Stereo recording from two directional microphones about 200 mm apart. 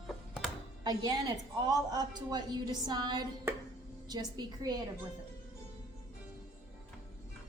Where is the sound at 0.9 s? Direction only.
20° right (ahead or behind).